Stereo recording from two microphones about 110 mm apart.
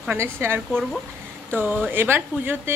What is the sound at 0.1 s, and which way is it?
A woman's voice, 20° right (ahead or behind).